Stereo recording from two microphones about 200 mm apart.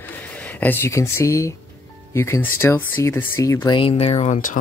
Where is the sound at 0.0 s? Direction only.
10° left (ahead or behind).